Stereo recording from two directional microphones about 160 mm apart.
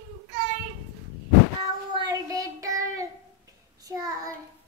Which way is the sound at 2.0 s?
20° right (ahead or behind).